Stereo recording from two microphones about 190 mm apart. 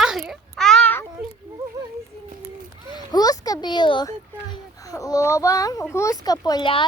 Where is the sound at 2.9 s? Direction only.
20° left (ahead or behind).